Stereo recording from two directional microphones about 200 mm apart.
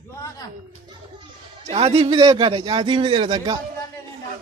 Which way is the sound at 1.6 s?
30° right (ahead or behind).